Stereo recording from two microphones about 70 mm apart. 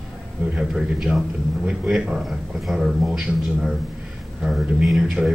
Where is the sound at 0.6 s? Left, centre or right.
Centre.